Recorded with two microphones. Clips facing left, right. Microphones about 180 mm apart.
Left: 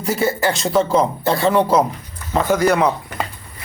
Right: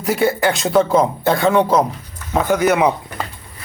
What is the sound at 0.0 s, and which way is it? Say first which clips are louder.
Speech: right 2 dB; centre (ahead or behind).